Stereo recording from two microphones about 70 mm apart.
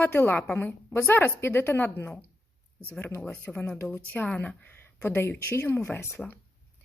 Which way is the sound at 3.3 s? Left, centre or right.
Left.